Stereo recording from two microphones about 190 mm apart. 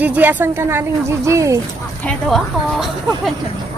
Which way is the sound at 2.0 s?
Centre (ahead or behind).